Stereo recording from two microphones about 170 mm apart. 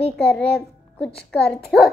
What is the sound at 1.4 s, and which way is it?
Speech, 5° left (ahead or behind).